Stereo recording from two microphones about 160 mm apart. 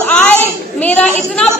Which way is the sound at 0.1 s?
10° left (ahead or behind).